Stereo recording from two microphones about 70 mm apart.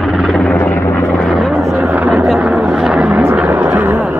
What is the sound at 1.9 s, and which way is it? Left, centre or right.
Vehicle, right.